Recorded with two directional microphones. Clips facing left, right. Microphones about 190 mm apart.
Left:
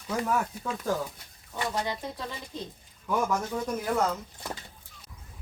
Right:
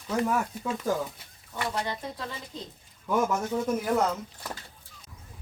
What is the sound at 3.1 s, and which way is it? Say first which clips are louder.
Speech: right 2 dB; 5° right (ahead or behind).